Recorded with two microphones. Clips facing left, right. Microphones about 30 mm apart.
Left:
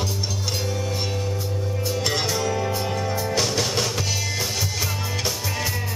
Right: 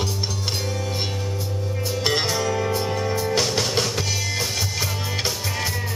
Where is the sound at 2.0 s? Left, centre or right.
Right.